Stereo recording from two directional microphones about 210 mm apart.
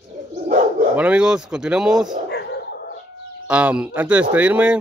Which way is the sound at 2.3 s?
50° left (ahead or behind).